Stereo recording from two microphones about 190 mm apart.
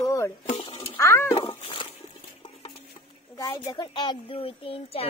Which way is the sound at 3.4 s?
15° left (ahead or behind).